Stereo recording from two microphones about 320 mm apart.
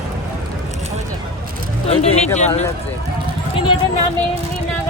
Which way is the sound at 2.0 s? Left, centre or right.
Centre.